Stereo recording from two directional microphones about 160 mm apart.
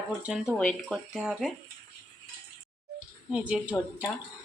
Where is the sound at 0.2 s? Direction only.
5° right (ahead or behind).